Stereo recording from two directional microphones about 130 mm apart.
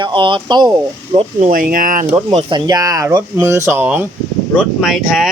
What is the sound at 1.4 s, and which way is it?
Speech, 90° right.